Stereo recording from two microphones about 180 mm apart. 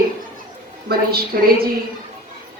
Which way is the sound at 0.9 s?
55° right (ahead or behind).